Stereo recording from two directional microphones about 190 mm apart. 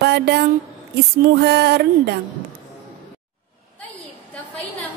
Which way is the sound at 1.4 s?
60° right (ahead or behind).